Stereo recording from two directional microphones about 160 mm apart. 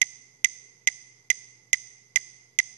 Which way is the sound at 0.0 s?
50° right (ahead or behind).